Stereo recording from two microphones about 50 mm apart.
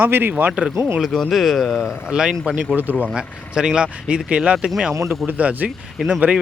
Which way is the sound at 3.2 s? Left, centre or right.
Centre.